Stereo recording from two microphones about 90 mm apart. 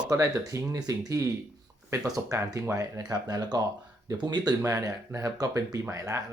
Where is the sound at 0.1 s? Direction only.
35° right (ahead or behind).